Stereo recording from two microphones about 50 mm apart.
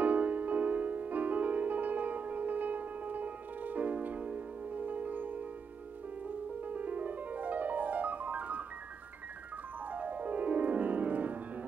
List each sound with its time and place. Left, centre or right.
0.0 s music: right
9.8 s piano: right